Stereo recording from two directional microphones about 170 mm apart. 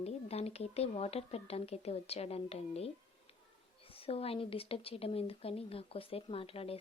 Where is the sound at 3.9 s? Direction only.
35° left (ahead or behind).